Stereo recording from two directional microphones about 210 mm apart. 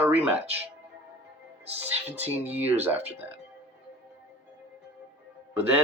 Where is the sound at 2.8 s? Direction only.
10° right (ahead or behind).